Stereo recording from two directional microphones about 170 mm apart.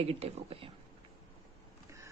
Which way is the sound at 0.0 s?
35° right (ahead or behind).